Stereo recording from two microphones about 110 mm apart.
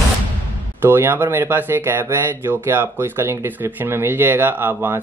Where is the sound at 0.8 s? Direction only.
20° right (ahead or behind).